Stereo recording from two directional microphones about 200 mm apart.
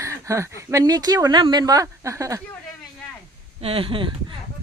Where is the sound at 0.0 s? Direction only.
15° right (ahead or behind).